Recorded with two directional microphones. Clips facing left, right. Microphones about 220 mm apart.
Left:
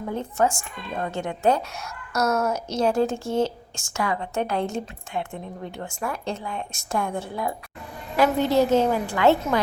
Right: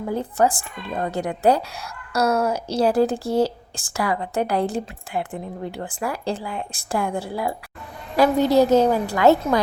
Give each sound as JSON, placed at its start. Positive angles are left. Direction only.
{"t": 0.1, "sound": "a woman's voice", "side_deg": -35}